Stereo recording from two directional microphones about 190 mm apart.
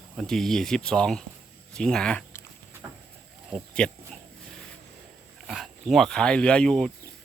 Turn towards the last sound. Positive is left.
turn(degrees=0)  # may be behind; listen again after turning